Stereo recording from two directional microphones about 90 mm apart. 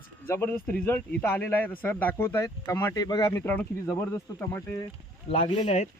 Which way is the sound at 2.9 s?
50° left (ahead or behind).